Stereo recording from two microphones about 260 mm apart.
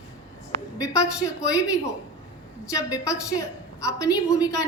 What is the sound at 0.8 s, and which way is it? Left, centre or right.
A woman's voice, centre.